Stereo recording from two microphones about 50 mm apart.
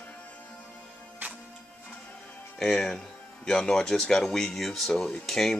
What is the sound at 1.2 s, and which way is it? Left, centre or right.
Music, right.